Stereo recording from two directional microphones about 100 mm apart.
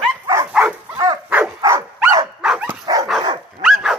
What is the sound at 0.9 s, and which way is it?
Dog, 40° right (ahead or behind).